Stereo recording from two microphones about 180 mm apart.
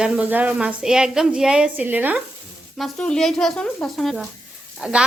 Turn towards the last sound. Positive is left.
turn(degrees=-5)  # may be behind; listen again after turning